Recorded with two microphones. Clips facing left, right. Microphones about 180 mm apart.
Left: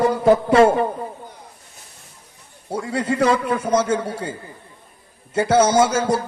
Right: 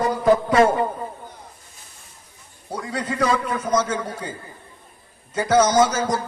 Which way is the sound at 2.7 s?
30° left (ahead or behind).